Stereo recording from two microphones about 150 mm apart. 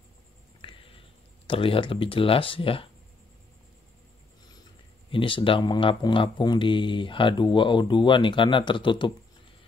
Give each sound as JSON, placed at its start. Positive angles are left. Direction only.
{"t": 0.6, "sound": "a sound", "side_deg": 35}
{"t": 1.5, "sound": "speech", "side_deg": 35}
{"t": 5.1, "sound": "speech", "side_deg": 35}